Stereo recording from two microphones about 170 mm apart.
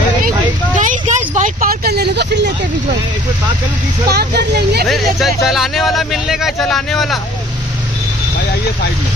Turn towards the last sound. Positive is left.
turn(degrees=0)  # may be behind; listen again after turning